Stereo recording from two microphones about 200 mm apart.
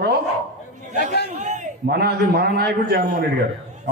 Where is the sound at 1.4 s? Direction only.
35° right (ahead or behind); by 3.0 s 55° right (ahead or behind).